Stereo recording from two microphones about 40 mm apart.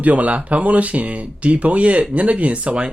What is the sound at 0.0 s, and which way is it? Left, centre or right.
Speech, right.